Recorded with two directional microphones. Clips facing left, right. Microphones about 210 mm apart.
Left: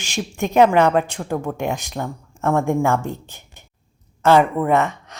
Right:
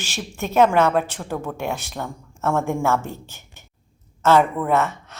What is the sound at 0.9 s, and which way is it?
Speech, 5° right (ahead or behind).